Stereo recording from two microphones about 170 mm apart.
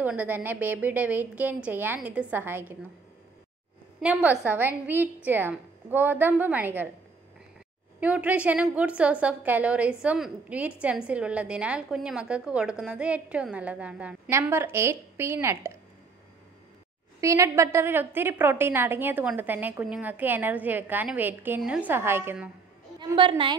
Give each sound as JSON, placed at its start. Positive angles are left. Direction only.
{"t": 0.0, "sound": "a woman's voice", "side_deg": -10}
{"t": 4.0, "sound": "a woman's voice", "side_deg": -10}
{"t": 8.0, "sound": "a woman's voice", "side_deg": -10}
{"t": 17.2, "sound": "a woman's voice", "side_deg": -15}
{"t": 22.9, "sound": "a woman's voice", "side_deg": -25}